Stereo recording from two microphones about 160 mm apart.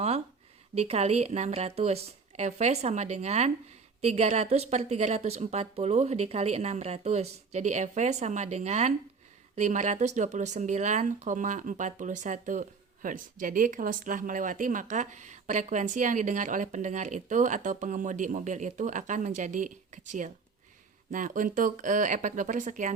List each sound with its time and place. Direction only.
0.8 s speech: 40° right (ahead or behind)